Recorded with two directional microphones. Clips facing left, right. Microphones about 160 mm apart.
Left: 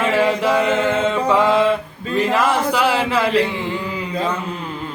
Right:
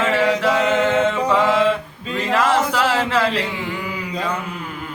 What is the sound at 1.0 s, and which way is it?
Music, 20° left (ahead or behind).